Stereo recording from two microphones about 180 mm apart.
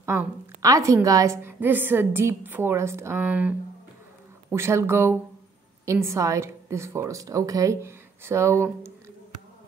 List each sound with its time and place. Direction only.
0.0 s a woman's voice: 15° right (ahead or behind)